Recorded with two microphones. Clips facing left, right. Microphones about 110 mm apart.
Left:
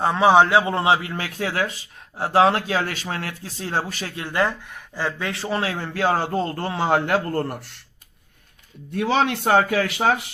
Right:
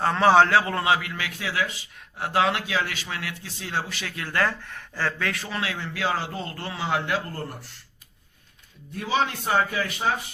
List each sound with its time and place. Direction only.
0.0 s a man's voice: 15° left (ahead or behind); by 1.9 s 45° left (ahead or behind)
2.1 s speech: 30° left (ahead or behind)
4.1 s a man's voice: 20° left (ahead or behind)
5.3 s a man's voice: 30° left (ahead or behind); by 7.8 s 65° left (ahead or behind)
8.9 s speech: 70° left (ahead or behind)